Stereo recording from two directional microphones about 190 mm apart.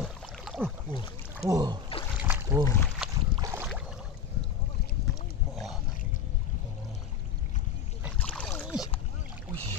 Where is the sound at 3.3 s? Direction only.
15° right (ahead or behind).